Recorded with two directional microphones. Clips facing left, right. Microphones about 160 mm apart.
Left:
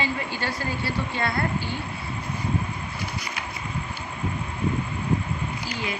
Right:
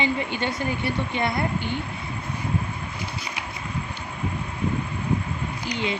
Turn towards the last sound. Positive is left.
turn(degrees=-20)  # may be behind; listen again after turning